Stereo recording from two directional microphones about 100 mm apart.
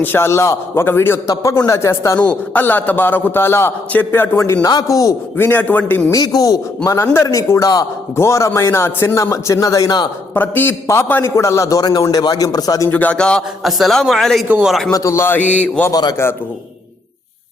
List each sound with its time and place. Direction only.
0.0 s a man's voice: 25° left (ahead or behind)
1.3 s a man's voice: 35° left (ahead or behind)
2.1 s a man's voice: 15° left (ahead or behind)
4.6 s a man's voice: 40° left (ahead or behind)
5.4 s a man's voice: 20° left (ahead or behind)
6.1 s a man's voice: 35° left (ahead or behind)
10.3 s a man's voice: 20° left (ahead or behind); by 12.9 s 40° left (ahead or behind)
12.9 s a man's voice: 15° left (ahead or behind)
13.6 s speech: centre (ahead or behind)
14.4 s speech: 15° right (ahead or behind)
14.8 s a man's voice: 35° left (ahead or behind); by 15.8 s 10° left (ahead or behind)
15.9 s a man's voice: 45° left (ahead or behind)